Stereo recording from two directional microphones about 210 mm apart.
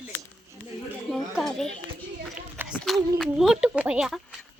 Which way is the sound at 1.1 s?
Centre (ahead or behind).